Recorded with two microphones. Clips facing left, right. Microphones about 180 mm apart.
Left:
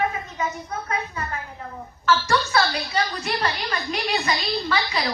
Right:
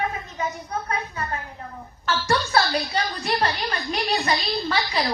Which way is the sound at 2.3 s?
35° right (ahead or behind).